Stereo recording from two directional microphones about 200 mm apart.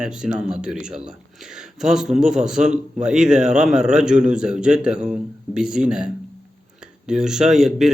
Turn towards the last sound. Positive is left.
turn(degrees=0)  # may be behind; listen again after turning